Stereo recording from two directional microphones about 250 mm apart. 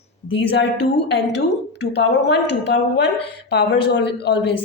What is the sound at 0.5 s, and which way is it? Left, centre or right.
A woman's voice, left.